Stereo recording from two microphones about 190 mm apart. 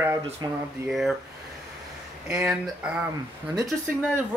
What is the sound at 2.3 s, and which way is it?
Speech, 5° right (ahead or behind).